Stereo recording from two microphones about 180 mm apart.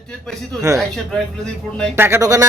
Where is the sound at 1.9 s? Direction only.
15° right (ahead or behind).